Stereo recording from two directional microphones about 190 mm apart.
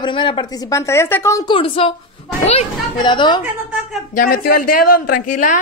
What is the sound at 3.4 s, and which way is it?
Speech, 5° right (ahead or behind).